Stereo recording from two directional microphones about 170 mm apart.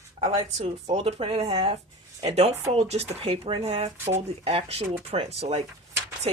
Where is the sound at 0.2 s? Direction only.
40° right (ahead or behind).